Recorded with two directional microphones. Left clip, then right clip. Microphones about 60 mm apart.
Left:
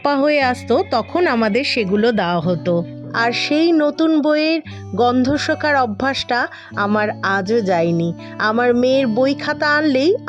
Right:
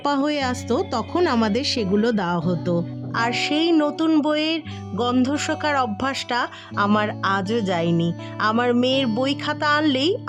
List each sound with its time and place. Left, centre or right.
0.0 s speech: centre
1.1 s speech: centre
2.0 s speech: left
3.1 s speech: left
5.2 s speech: left
7.9 s speech: left